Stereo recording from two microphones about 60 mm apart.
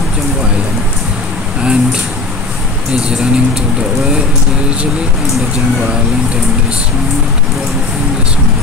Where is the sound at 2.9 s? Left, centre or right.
Centre.